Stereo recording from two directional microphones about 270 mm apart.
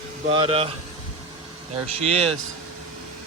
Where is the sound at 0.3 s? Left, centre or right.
Right.